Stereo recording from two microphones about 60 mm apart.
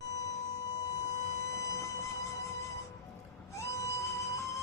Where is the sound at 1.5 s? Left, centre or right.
Left.